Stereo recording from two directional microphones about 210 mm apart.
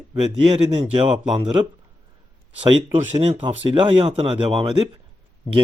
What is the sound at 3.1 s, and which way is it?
Speech, 25° right (ahead or behind).